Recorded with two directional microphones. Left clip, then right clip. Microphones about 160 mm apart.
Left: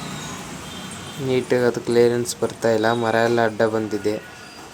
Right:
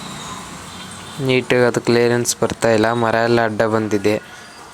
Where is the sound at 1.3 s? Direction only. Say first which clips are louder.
Right 4 dB; 40° right (ahead or behind).